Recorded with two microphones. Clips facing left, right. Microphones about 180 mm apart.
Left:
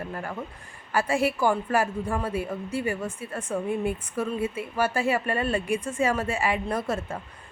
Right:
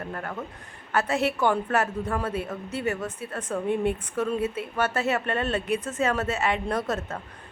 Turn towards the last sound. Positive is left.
turn(degrees=10)  # may be behind; listen again after turning